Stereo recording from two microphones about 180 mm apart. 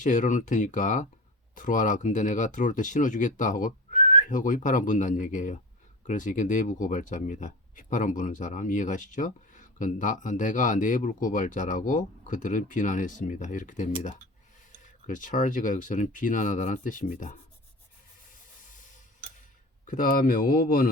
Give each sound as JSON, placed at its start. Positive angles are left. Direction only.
{"t": 0.0, "sound": "speech", "side_deg": 45}
{"t": 15.0, "sound": "speech", "side_deg": 45}
{"t": 19.8, "sound": "speech", "side_deg": 50}